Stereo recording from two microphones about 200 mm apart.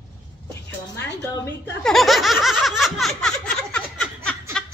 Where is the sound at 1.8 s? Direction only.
Centre (ahead or behind).